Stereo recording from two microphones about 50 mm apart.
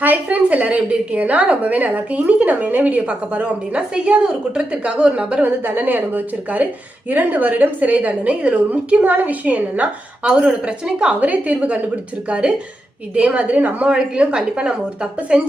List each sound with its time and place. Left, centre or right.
0.0 s a woman's voice: right
5.4 s a woman's voice: right
13.8 s a woman's voice: right